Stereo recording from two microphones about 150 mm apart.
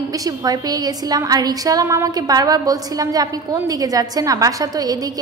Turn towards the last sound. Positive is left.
turn(degrees=-25)  # may be behind; listen again after turning